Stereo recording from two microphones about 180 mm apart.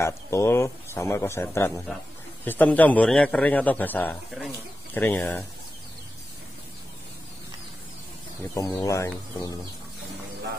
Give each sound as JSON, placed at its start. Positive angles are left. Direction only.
{"t": 0.0, "sound": "a man's voice", "side_deg": 15}
{"t": 8.5, "sound": "a man's voice", "side_deg": 20}